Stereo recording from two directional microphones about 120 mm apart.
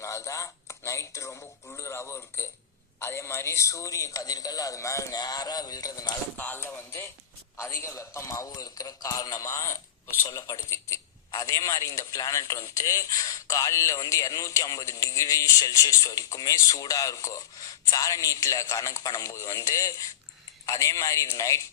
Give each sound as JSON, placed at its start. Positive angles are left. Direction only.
{"t": 0.0, "sound": "a man's voice", "side_deg": 25}
{"t": 6.3, "sound": "a man's voice", "side_deg": 15}